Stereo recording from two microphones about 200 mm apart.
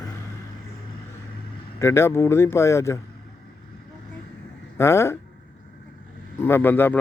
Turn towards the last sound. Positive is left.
turn(degrees=10)  # may be behind; listen again after turning